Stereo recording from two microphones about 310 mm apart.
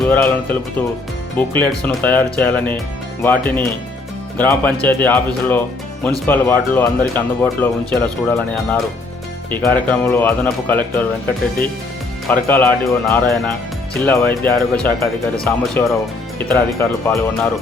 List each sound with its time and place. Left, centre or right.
0.1 s speech: centre
12.3 s speech: centre